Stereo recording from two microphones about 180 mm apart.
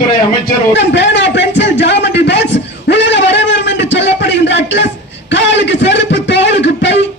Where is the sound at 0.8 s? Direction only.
80° left.